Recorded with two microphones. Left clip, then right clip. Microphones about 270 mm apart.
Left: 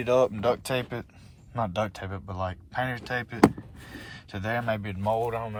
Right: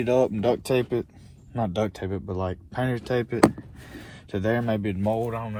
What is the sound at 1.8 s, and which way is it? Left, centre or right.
Speech, left.